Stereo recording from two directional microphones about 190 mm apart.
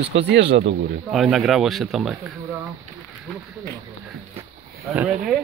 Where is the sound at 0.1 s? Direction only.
65° right (ahead or behind).